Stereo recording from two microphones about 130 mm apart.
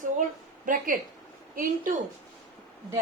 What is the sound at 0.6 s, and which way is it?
Speech, 90° right.